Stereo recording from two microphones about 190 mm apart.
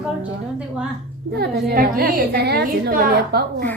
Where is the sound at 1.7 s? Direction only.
55° right (ahead or behind).